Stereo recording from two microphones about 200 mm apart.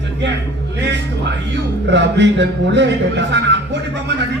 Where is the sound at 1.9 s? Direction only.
60° right (ahead or behind).